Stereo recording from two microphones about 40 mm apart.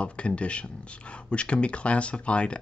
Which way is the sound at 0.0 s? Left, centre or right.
Left.